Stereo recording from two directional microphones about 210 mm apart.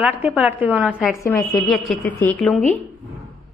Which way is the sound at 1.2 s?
15° left (ahead or behind).